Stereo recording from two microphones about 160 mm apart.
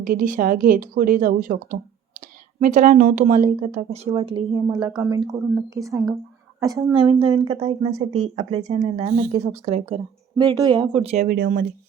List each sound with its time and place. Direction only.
0.0 s a woman's voice: 55° right (ahead or behind)
2.6 s speech: 45° right (ahead or behind)
4.2 s speech: 35° right (ahead or behind)
4.5 s a woman's voice: 20° right (ahead or behind)
7.1 s speech: 35° right (ahead or behind)
10.8 s speech: 40° right (ahead or behind)
11.3 s a woman's voice: 65° right (ahead or behind)